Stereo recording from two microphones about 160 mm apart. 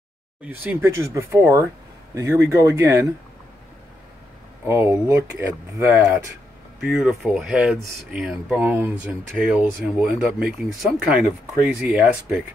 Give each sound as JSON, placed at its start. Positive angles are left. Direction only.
{"t": 0.5, "sound": "speech", "side_deg": -10}
{"t": 4.6, "sound": "speech", "side_deg": -15}